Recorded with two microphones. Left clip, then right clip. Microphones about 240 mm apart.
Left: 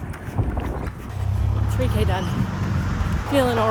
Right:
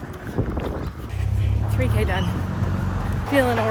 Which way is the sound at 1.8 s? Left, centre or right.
Centre.